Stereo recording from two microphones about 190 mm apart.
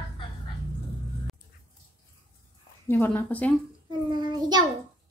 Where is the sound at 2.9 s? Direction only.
10° left (ahead or behind).